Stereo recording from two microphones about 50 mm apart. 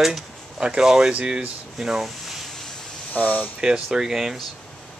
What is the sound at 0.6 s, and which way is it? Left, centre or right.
Speech, centre.